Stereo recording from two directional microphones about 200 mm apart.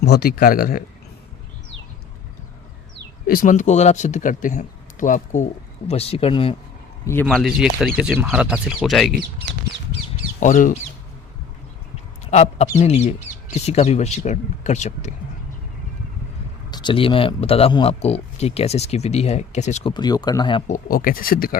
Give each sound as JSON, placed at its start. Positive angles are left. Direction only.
{"t": 0.0, "sound": "speech", "side_deg": 50}
{"t": 3.2, "sound": "speech", "side_deg": 45}
{"t": 7.3, "sound": "speech", "side_deg": 0}
{"t": 10.4, "sound": "speech", "side_deg": 40}
{"t": 12.2, "sound": "speech", "side_deg": 35}
{"t": 16.7, "sound": "speech", "side_deg": 25}
{"t": 19.9, "sound": "speech", "side_deg": 20}
{"t": 20.7, "sound": "speech", "side_deg": 45}